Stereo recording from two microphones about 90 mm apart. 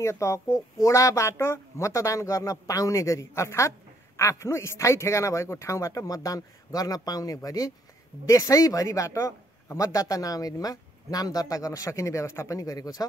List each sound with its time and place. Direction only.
0.0 s speech: 30° left (ahead or behind)